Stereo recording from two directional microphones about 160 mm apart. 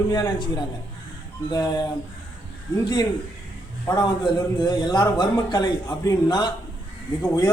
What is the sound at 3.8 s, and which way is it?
A man's voice, 25° left (ahead or behind).